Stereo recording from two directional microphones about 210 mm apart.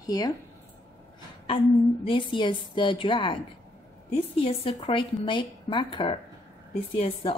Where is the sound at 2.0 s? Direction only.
25° left (ahead or behind).